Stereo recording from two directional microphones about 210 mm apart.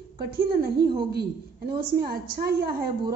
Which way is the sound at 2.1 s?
45° right (ahead or behind).